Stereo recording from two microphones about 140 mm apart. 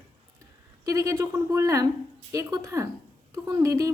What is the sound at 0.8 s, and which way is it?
A woman's voice, 25° right (ahead or behind).